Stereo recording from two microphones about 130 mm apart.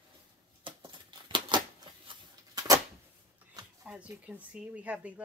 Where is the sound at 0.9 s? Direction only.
40° right (ahead or behind).